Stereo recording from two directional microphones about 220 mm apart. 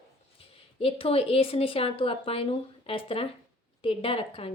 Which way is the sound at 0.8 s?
25° left (ahead or behind).